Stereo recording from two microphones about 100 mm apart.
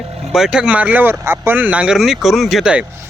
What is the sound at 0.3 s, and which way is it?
Speech, 5° right (ahead or behind).